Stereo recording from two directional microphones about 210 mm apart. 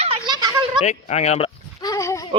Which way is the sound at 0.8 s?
30° left (ahead or behind).